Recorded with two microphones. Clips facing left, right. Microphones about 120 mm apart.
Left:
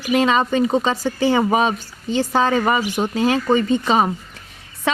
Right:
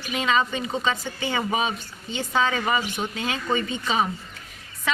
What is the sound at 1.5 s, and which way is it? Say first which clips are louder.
Speech: left 7 dB; 65° left (ahead or behind).